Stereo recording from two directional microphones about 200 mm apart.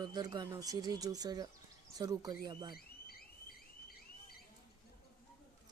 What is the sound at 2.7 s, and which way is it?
Car alarm, 50° left (ahead or behind).